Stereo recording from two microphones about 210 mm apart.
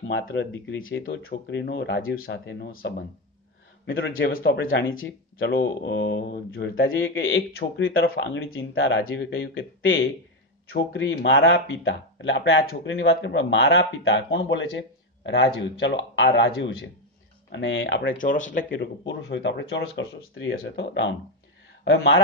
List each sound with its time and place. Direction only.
0.3 s speech: 60° left (ahead or behind)
1.1 s speech: 55° left (ahead or behind)
2.2 s speech: 50° left (ahead or behind)
3.8 s speech: 65° left (ahead or behind); by 6.7 s 45° left (ahead or behind)
6.7 s a man's voice: 70° left (ahead or behind)
7.5 s speech: 55° left (ahead or behind)
18.1 s speech: 40° left (ahead or behind); by 19.5 s 55° left (ahead or behind)
20.0 s a man's voice: 70° left (ahead or behind)
20.5 s speech: 55° left (ahead or behind)